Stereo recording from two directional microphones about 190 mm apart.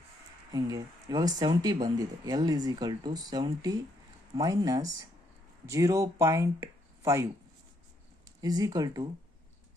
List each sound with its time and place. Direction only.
0.5 s speech: 20° right (ahead or behind)
8.4 s speech: 20° right (ahead or behind)